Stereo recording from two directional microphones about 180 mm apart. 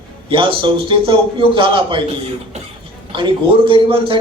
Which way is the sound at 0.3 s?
30° right (ahead or behind).